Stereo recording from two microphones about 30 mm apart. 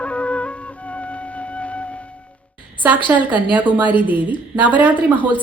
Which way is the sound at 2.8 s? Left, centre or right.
Right.